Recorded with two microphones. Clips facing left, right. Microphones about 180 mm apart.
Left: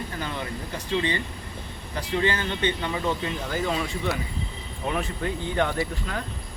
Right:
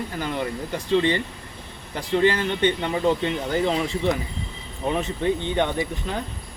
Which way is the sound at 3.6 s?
25° right (ahead or behind).